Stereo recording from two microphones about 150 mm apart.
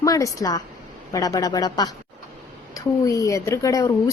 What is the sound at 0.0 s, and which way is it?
Speech, 20° left (ahead or behind).